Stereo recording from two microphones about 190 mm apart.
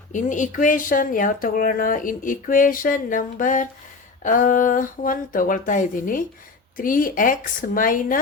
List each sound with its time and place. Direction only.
0.1 s speech: 40° left (ahead or behind)